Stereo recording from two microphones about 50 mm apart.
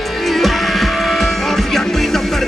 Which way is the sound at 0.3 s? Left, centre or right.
Centre.